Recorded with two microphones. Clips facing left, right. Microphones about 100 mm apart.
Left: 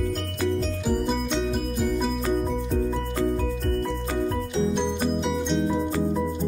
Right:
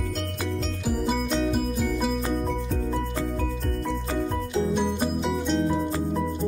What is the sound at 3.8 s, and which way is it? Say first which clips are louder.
Music: left 1 dB; centre (ahead or behind).